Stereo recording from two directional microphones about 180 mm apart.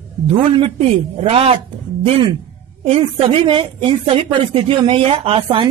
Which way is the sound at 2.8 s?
35° right (ahead or behind).